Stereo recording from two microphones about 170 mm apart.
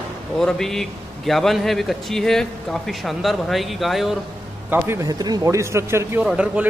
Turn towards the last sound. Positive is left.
turn(degrees=-5)  # may be behind; listen again after turning